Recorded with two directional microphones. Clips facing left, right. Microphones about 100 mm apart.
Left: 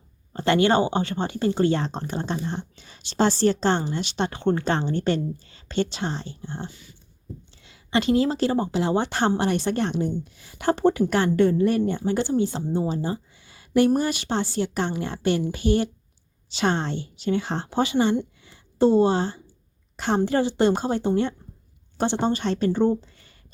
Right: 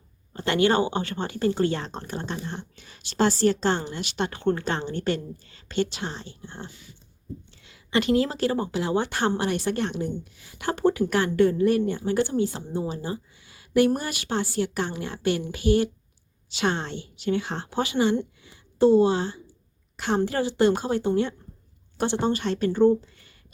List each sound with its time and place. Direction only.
0.3 s a woman's voice: 30° left (ahead or behind)
18.4 s a sound: 30° left (ahead or behind)
20.0 s speech: 30° left (ahead or behind)